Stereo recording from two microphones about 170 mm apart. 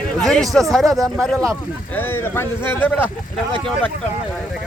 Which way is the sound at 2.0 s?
15° left (ahead or behind).